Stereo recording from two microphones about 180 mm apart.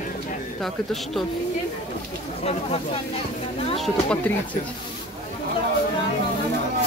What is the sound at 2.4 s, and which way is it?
Speech, 35° left (ahead or behind).